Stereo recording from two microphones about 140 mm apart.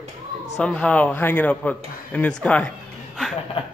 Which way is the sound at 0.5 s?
5° left (ahead or behind).